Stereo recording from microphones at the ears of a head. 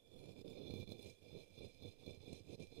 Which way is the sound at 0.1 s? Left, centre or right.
Right.